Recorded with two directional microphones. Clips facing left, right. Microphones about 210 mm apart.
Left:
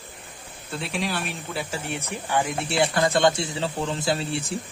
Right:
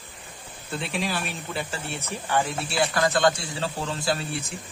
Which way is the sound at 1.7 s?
15° left (ahead or behind).